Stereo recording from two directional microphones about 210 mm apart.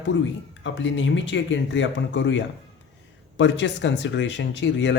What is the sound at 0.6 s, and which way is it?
Speech, 60° left (ahead or behind).